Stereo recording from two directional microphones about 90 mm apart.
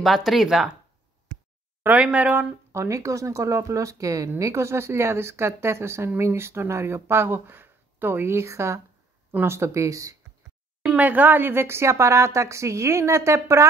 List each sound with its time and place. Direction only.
0.0 s speech: centre (ahead or behind)
1.8 s speech: 15° right (ahead or behind)
2.7 s a woman's voice: 30° right (ahead or behind)
11.0 s a woman's voice: 20° right (ahead or behind)